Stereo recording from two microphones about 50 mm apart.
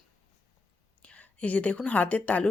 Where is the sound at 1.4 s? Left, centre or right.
Left.